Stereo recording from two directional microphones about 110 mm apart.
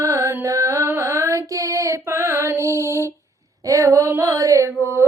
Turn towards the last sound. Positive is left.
turn(degrees=-25)  # may be behind; listen again after turning